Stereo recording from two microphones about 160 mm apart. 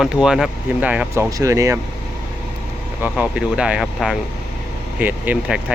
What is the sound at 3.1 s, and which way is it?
Speech, 5° right (ahead or behind).